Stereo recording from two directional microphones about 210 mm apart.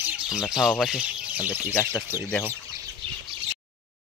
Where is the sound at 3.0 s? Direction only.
25° right (ahead or behind).